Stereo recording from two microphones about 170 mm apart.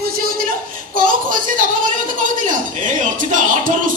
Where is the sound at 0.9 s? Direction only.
55° right (ahead or behind).